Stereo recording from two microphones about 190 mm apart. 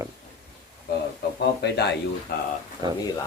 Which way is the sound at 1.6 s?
60° left (ahead or behind).